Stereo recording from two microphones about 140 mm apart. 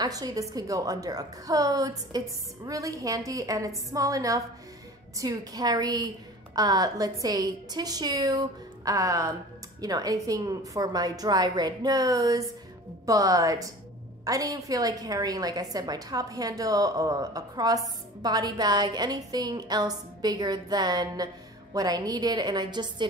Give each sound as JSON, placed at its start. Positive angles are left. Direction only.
{"t": 0.0, "sound": "a woman's voice", "side_deg": -25}